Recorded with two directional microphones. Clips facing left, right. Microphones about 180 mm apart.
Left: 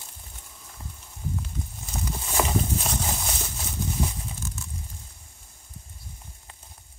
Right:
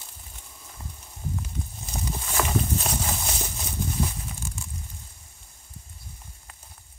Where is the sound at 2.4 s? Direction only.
15° left (ahead or behind).